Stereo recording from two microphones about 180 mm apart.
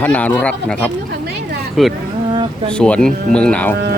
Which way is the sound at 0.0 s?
10° left (ahead or behind).